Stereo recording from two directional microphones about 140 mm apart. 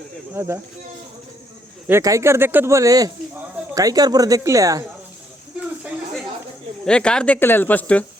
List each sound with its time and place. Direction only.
0.3 s speech: 20° right (ahead or behind)
1.9 s speech: 20° right (ahead or behind)
5.5 s a sound: 10° right (ahead or behind)
6.8 s speech: 5° left (ahead or behind)